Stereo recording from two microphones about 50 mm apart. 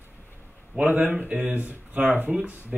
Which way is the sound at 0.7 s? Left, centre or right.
Right.